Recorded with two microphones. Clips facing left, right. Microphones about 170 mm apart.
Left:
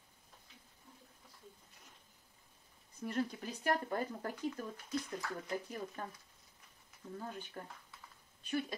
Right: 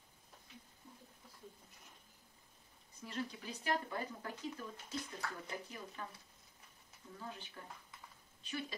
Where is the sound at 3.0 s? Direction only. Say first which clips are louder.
Left 6 dB; 50° left (ahead or behind).